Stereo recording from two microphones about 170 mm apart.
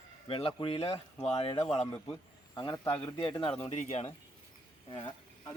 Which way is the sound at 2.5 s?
25° left (ahead or behind).